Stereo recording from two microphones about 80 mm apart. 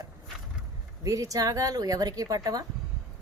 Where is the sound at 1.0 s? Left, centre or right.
Right.